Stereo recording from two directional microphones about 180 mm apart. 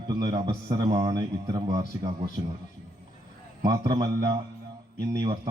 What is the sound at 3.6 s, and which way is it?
A man's voice, 20° right (ahead or behind).